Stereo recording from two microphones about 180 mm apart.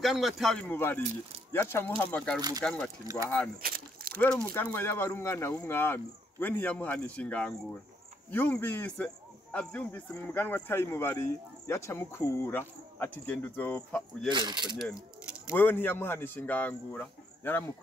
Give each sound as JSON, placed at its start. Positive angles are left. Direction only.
{"t": 0.0, "sound": "speech", "side_deg": 0}
{"t": 3.2, "sound": "speech", "side_deg": -20}
{"t": 3.6, "sound": "a sound", "side_deg": -55}
{"t": 4.6, "sound": "speech", "side_deg": 10}
{"t": 14.3, "sound": "speech", "side_deg": -25}
{"t": 14.8, "sound": "speech", "side_deg": 0}
{"t": 15.5, "sound": "speech", "side_deg": 10}